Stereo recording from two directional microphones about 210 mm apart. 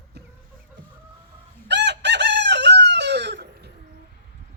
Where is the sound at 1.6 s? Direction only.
55° right (ahead or behind).